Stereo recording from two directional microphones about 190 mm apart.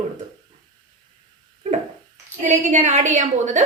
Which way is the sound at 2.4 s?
40° right (ahead or behind).